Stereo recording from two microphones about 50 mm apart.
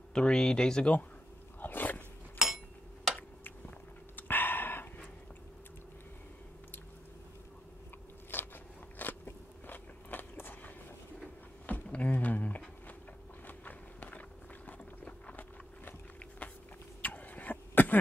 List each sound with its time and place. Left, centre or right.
0.1 s speech: centre
1.6 s biting: left
2.3 s a sound: centre
4.2 s dog: left
8.3 s biting: left
11.6 s a sound: left
13.5 s walk: left
14.7 s a sound: left
17.0 s throat clearing: left